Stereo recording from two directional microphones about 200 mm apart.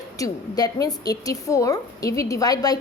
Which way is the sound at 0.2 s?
20° left (ahead or behind).